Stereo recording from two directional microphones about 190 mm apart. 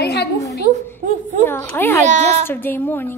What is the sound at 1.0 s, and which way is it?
Speech, 40° right (ahead or behind).